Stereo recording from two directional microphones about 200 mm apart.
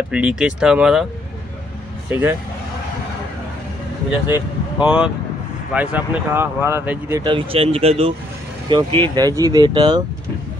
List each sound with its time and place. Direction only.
0.1 s speech: 5° right (ahead or behind)
2.0 s speech: 10° right (ahead or behind)
4.8 s speech: 5° right (ahead or behind)